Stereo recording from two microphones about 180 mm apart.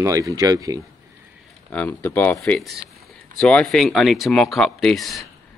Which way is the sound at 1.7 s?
10° left (ahead or behind).